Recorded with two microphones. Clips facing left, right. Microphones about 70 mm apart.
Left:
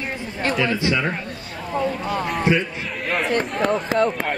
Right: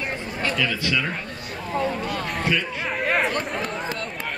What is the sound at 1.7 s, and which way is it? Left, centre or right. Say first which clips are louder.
Speech: left 2 dB; centre.